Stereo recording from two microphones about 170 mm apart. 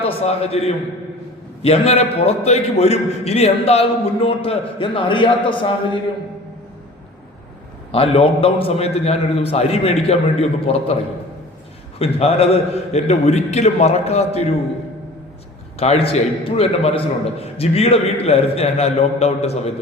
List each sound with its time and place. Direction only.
0.0 s a man's voice: 35° left (ahead or behind)
7.9 s a man's voice: 35° left (ahead or behind)
11.9 s a man's voice: 35° left (ahead or behind)
15.8 s a man's voice: 35° left (ahead or behind)